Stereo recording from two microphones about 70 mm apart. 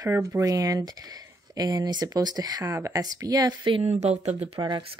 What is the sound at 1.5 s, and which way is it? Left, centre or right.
Speech, right.